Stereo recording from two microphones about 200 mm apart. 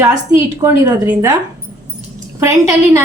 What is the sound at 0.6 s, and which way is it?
Speech, 15° right (ahead or behind).